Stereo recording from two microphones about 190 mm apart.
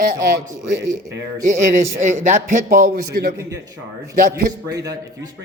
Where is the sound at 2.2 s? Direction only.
40° right (ahead or behind).